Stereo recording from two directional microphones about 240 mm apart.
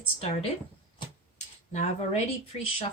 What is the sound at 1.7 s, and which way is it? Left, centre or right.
Speech, left.